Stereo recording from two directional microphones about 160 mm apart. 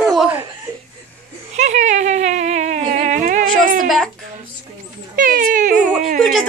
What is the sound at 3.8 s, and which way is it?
Speech, centre (ahead or behind).